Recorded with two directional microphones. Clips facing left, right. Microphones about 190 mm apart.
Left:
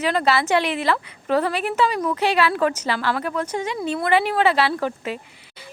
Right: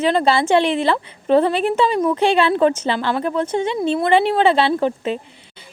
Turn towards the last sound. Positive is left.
turn(degrees=-25)  # may be behind; listen again after turning